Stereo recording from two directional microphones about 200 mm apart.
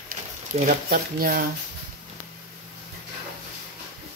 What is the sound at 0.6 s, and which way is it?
Speech, 45° right (ahead or behind).